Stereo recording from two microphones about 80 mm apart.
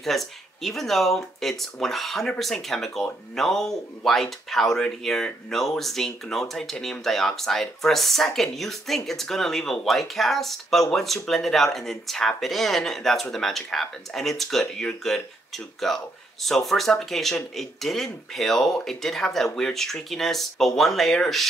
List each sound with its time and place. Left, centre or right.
0.0 s speech: centre